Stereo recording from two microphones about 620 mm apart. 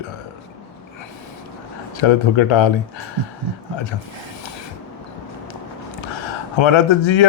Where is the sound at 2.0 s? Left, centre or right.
Left.